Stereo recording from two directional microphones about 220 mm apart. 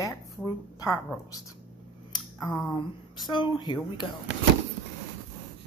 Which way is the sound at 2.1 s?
20° left (ahead or behind).